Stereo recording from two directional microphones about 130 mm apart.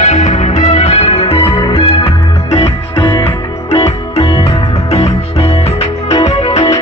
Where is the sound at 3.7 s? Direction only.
50° left (ahead or behind).